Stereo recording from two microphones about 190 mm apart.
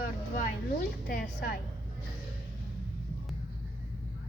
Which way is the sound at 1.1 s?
45° left (ahead or behind).